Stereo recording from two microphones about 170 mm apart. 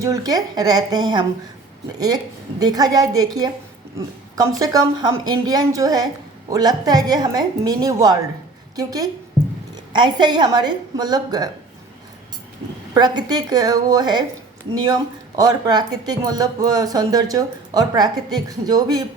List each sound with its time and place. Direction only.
0.0 s a woman's voice: 20° right (ahead or behind)
12.9 s speech: 25° right (ahead or behind)